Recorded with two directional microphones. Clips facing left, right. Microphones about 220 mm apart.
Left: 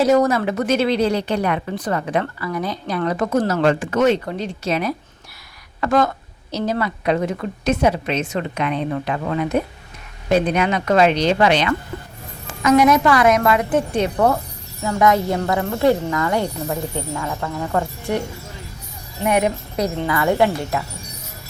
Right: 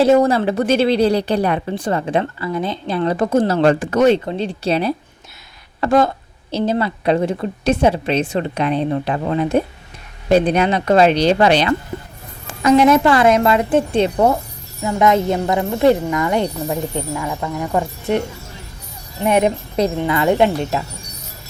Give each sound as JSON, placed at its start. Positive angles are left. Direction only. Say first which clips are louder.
{"t": 0.0, "sound": "a woman's voice", "louder": "right 3 dB", "side_deg": -30}
{"t": 19.2, "sound": "speech", "louder": "right 3 dB", "side_deg": -25}